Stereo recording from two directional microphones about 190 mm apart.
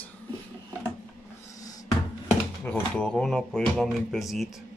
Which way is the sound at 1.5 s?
20° left (ahead or behind).